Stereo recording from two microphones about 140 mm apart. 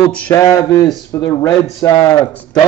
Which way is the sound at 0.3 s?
25° left (ahead or behind).